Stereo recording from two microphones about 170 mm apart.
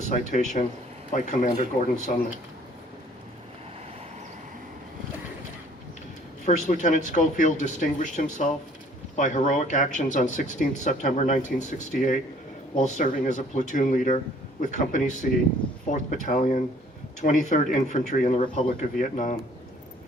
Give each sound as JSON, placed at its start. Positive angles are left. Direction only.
{"t": 0.1, "sound": "speech", "side_deg": 45}
{"t": 1.7, "sound": "speech", "side_deg": 35}
{"t": 6.4, "sound": "speech", "side_deg": 45}